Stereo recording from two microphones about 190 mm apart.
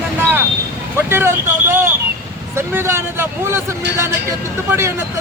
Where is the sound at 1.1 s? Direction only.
10° right (ahead or behind).